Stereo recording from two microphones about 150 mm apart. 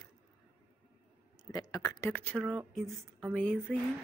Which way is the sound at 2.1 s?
10° left (ahead or behind).